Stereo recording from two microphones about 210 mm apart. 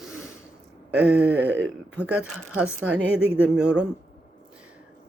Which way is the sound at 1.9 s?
5° right (ahead or behind).